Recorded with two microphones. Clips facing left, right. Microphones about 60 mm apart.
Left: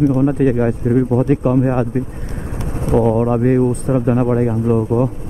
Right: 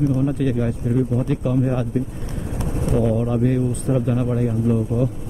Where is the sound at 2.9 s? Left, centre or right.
Left.